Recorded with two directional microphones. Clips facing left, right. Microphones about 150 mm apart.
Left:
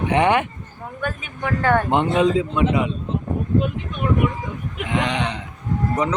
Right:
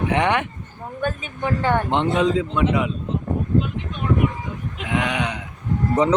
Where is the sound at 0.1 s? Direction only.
5° left (ahead or behind).